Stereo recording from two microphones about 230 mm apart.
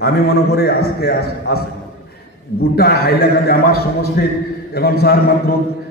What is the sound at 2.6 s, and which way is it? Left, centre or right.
A man's voice, left.